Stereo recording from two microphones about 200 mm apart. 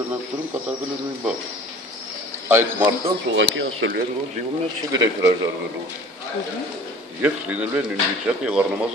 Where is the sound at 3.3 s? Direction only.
65° right (ahead or behind).